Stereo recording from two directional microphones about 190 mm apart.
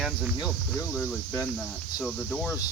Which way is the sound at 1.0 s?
10° left (ahead or behind).